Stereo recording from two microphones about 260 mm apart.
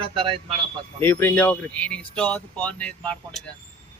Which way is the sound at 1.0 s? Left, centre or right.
Centre.